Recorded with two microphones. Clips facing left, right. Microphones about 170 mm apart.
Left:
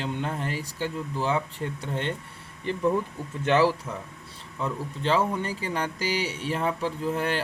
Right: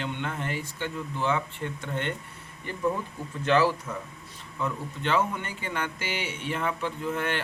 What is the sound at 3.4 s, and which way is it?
Speech, 20° left (ahead or behind).